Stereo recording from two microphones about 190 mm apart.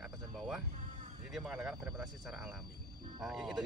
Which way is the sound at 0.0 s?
Centre (ahead or behind).